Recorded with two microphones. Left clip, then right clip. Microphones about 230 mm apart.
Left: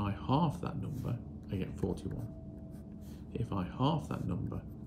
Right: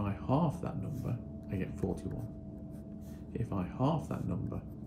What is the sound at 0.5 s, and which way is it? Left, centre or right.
Speech, centre.